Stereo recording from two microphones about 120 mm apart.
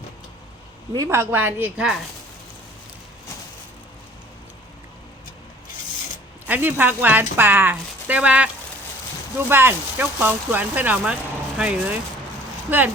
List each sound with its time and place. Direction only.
0.9 s speech: 25° right (ahead or behind)
6.5 s speech: 15° right (ahead or behind)
9.5 s speech: 20° right (ahead or behind)